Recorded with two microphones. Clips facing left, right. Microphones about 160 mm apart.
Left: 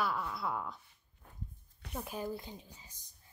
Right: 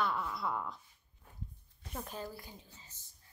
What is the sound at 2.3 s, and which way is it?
Speech, 20° left (ahead or behind).